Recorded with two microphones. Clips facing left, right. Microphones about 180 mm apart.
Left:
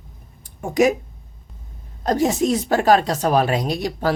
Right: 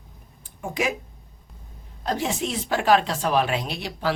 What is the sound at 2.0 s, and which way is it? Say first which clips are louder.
A woman's voice: left 8 dB; 40° left (ahead or behind).